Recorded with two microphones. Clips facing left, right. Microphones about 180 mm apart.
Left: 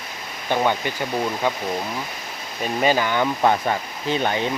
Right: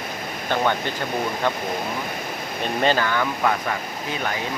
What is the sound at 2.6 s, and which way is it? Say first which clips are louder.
Speech: left 1 dB; 10° left (ahead or behind).